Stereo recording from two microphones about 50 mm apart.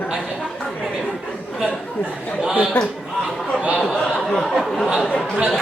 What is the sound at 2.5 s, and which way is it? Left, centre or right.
Speech, right.